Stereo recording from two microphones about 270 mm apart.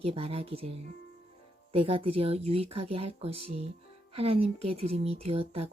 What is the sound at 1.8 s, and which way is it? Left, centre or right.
Speech, centre.